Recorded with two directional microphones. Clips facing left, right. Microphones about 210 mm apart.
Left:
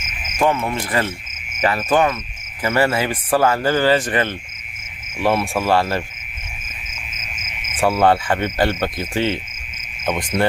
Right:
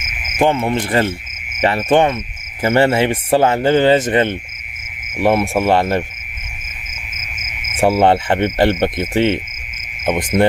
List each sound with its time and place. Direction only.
0.3 s a man's voice: 30° right (ahead or behind)
7.8 s a man's voice: 25° right (ahead or behind)